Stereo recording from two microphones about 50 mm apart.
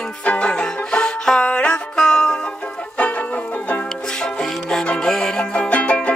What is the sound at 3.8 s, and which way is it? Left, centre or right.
Music, centre.